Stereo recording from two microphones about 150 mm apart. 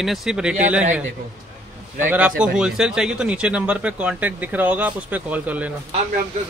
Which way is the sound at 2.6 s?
5° right (ahead or behind).